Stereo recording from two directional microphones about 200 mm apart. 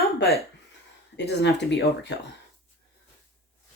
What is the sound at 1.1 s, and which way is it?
Speech, 60° left (ahead or behind).